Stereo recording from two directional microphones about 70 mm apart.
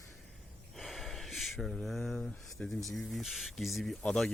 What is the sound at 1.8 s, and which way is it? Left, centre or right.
Speech, centre.